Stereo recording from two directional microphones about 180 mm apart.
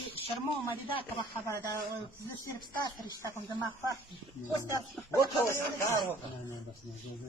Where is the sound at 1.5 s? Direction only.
15° left (ahead or behind).